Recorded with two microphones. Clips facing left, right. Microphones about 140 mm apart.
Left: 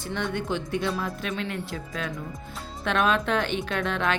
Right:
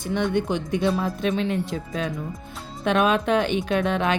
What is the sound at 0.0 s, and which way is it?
Speech, 15° right (ahead or behind).